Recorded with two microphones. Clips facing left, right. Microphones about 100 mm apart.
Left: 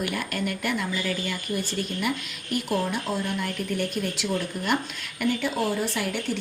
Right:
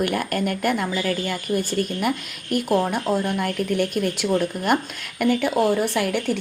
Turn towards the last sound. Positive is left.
turn(degrees=-60)  # may be behind; listen again after turning